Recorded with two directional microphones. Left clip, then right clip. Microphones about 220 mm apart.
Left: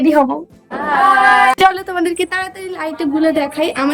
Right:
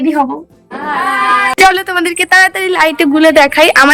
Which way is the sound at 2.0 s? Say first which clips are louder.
Right 14 dB; centre (ahead or behind).